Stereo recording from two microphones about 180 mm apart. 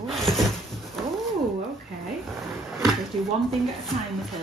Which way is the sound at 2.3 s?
Centre (ahead or behind).